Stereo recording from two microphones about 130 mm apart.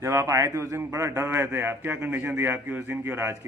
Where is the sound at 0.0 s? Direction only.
20° right (ahead or behind).